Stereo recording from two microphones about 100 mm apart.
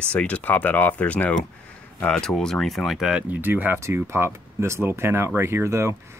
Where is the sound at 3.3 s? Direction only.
20° right (ahead or behind).